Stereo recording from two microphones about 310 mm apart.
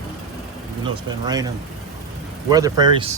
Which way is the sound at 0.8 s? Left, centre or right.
Centre.